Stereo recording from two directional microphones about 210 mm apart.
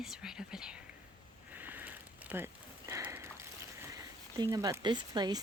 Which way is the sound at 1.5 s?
10° right (ahead or behind).